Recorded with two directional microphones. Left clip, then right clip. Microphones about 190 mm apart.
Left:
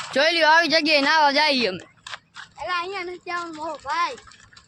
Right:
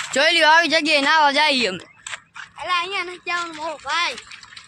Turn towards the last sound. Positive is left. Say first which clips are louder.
# right 2 dB
turn(degrees=35)  # may be behind; listen again after turning